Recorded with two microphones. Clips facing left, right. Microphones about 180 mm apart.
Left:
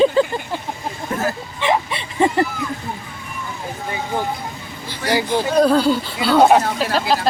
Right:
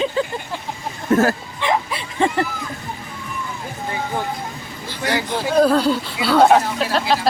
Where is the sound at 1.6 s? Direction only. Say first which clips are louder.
Left 1 dB; centre (ahead or behind).